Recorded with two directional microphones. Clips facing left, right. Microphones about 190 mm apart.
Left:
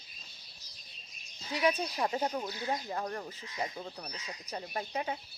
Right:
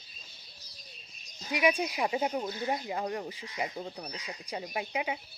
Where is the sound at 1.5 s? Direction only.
15° right (ahead or behind).